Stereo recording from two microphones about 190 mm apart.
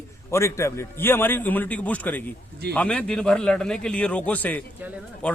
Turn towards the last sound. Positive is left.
turn(degrees=5)  # may be behind; listen again after turning